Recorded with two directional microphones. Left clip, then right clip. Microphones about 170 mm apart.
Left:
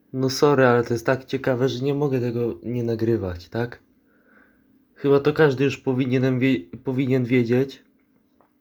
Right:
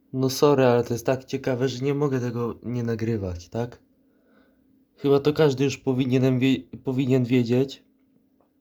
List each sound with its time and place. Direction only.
0.2 s speech: 15° right (ahead or behind)
5.1 s speech: 25° right (ahead or behind)